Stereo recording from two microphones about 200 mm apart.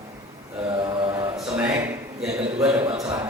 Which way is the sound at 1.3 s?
5° right (ahead or behind).